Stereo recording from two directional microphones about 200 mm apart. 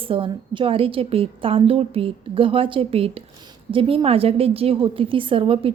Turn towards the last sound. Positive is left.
turn(degrees=-25)  # may be behind; listen again after turning